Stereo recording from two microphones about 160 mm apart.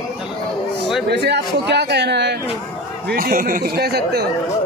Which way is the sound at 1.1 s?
90° right.